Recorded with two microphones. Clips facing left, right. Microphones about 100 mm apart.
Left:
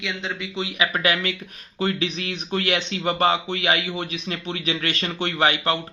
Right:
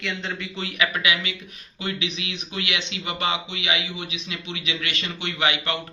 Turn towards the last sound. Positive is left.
turn(degrees=35)  # may be behind; listen again after turning